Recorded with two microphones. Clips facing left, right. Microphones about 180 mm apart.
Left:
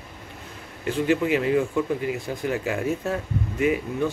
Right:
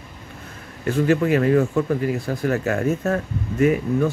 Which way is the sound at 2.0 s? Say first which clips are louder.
Right 4 dB; 40° right (ahead or behind).